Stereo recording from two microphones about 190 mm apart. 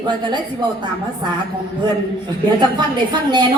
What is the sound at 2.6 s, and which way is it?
Speech, 25° right (ahead or behind).